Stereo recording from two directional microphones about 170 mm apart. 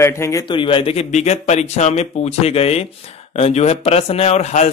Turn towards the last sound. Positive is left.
turn(degrees=40)  # may be behind; listen again after turning